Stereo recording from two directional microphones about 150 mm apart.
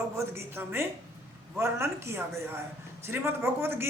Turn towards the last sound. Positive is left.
turn(degrees=-15)  # may be behind; listen again after turning